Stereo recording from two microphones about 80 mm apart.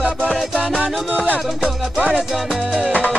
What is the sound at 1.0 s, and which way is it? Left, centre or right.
Music, centre.